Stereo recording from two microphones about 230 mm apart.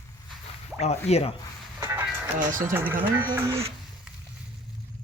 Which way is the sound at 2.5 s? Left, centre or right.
Centre.